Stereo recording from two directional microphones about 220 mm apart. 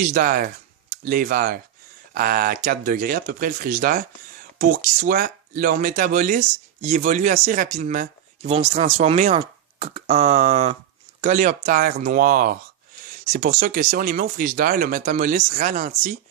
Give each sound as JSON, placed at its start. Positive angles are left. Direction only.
{"t": 0.0, "sound": "speech", "side_deg": -40}